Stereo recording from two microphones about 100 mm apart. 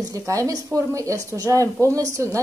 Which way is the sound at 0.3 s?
35° right (ahead or behind).